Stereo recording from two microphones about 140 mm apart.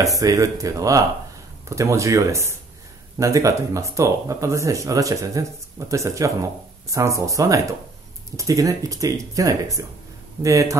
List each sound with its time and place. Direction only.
0.0 s speech: 25° right (ahead or behind)